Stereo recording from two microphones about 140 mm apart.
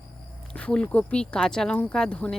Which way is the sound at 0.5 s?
5° left (ahead or behind).